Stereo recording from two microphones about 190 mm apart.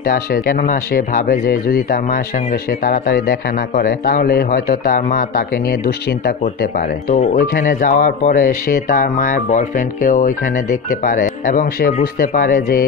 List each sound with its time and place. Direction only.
0.0 s speech: 55° left (ahead or behind)
7.3 s speech: 45° left (ahead or behind)